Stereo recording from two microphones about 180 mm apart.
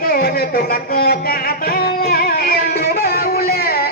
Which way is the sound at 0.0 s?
55° left (ahead or behind).